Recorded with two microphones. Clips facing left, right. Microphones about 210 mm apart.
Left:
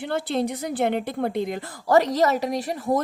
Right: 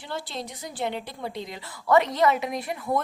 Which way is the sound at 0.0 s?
60° left (ahead or behind).